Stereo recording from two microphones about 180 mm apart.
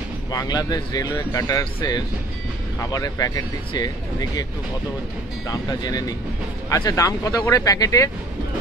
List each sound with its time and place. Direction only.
0.3 s speech: 20° left (ahead or behind)
5.5 s speech: 20° left (ahead or behind)